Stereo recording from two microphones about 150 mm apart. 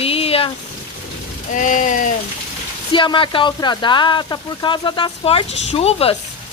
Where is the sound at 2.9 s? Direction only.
35° left (ahead or behind).